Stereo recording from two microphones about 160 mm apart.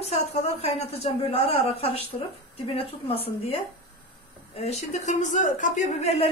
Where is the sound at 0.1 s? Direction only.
40° left (ahead or behind).